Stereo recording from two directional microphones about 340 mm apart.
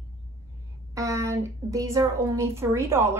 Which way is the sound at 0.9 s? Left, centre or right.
Centre.